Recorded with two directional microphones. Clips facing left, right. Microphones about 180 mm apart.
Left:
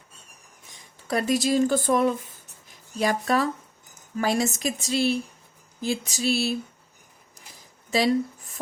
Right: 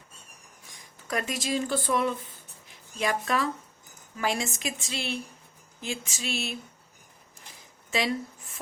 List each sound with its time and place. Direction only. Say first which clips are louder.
0.7 s a woman's voice: left 5 dB; 30° left (ahead or behind)
7.9 s speech: left 7 dB; 35° left (ahead or behind)